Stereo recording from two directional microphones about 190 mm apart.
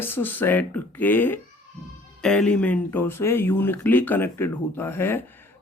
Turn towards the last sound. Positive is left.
turn(degrees=10)  # may be behind; listen again after turning